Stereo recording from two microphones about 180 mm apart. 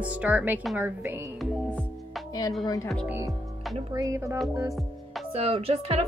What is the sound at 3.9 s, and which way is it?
Speech, 20° right (ahead or behind).